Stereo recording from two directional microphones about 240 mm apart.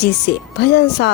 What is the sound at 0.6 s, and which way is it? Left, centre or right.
Speech, left.